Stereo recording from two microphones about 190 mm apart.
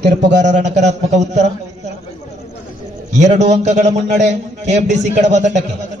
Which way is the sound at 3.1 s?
40° right (ahead or behind).